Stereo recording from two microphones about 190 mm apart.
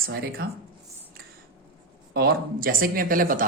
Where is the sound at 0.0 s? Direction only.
55° right (ahead or behind).